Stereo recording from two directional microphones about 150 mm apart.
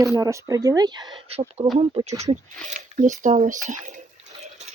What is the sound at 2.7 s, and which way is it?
Speech, 55° right (ahead or behind).